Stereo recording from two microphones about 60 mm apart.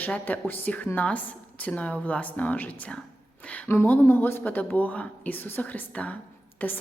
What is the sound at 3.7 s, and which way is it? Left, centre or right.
Speech, left.